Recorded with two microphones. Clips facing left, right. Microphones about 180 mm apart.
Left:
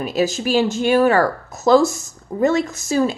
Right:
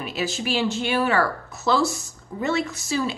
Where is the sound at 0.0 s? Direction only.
40° left (ahead or behind).